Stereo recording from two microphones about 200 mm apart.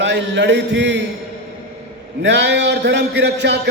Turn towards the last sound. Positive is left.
turn(degrees=-60)  # may be behind; listen again after turning